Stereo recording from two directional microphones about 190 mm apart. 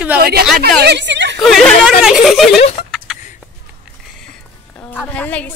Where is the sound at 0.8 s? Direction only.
65° right (ahead or behind).